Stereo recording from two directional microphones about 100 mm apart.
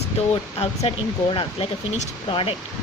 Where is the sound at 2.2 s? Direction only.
65° left (ahead or behind).